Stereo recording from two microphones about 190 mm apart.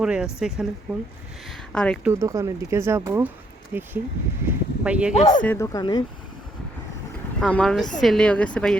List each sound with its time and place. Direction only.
0.0 s a woman's voice: 5° right (ahead or behind)
2.0 s speech: 15° right (ahead or behind)
5.1 s speech: 35° left (ahead or behind)
5.4 s speech: 10° left (ahead or behind)
7.4 s a woman's voice: 5° left (ahead or behind)